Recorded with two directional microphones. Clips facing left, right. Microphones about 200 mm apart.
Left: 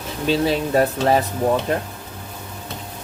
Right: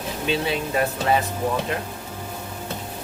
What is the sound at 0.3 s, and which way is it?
Speech, 40° left (ahead or behind).